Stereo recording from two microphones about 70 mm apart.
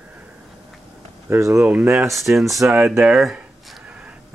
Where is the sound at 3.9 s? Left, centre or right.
Centre.